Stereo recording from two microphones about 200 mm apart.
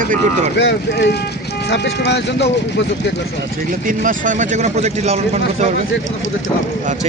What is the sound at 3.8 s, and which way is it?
Speech, 40° right (ahead or behind).